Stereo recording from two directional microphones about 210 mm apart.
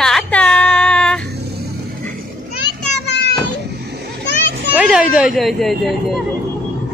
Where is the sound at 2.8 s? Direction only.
55° left (ahead or behind).